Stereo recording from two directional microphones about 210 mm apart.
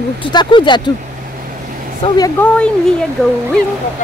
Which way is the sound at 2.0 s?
20° left (ahead or behind).